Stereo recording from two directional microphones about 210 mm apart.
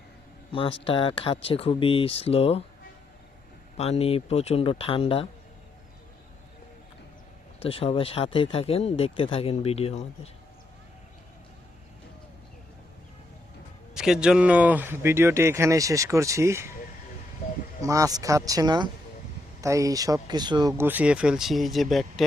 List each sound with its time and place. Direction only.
0.5 s speech: 25° left (ahead or behind)
3.8 s speech: 30° left (ahead or behind)
7.6 s speech: 25° left (ahead or behind)
13.9 s speech: 5° right (ahead or behind)
17.8 s speech: 15° right (ahead or behind); by 22.3 s centre (ahead or behind)